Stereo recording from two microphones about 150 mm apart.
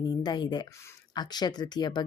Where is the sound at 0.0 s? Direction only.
30° left (ahead or behind).